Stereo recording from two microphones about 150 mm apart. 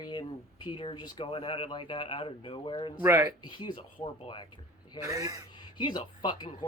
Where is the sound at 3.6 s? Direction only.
35° left (ahead or behind).